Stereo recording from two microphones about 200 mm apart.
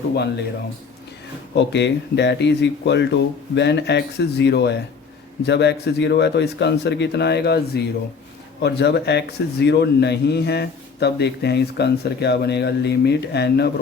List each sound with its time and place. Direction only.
1.5 s a man's voice: 60° left (ahead or behind)